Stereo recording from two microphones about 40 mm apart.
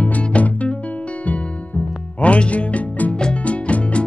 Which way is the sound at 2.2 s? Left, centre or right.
Left.